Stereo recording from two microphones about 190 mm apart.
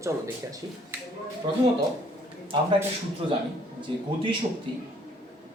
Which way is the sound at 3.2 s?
30° right (ahead or behind).